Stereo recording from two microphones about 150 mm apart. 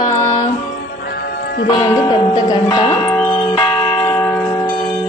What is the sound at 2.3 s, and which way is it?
Speech, 25° left (ahead or behind).